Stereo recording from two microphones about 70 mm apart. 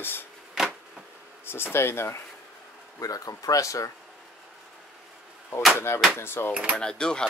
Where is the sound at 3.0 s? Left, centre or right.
Left.